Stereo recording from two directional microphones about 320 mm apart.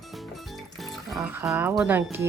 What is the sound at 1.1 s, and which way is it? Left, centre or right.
A child's voice, centre.